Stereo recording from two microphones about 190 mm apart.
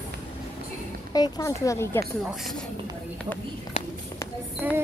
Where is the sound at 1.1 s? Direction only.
20° left (ahead or behind).